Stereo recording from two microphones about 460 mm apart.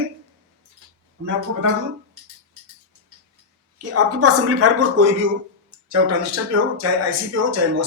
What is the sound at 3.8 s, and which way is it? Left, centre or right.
Speech, right.